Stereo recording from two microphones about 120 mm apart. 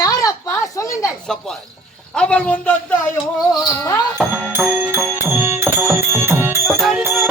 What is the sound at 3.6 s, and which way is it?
Speech, 25° left (ahead or behind).